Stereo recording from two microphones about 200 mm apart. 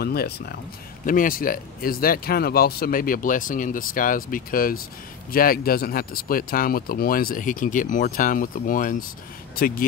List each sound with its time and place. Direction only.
0.0 s speech: 50° left (ahead or behind)